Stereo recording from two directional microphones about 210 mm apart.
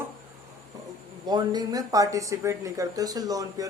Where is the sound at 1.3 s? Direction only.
20° right (ahead or behind).